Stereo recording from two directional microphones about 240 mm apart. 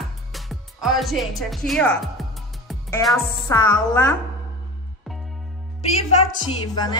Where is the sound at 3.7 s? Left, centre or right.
Centre.